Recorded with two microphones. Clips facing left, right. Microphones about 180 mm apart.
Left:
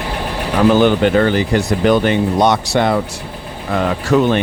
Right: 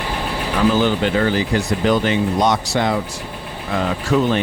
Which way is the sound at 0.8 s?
60° left (ahead or behind).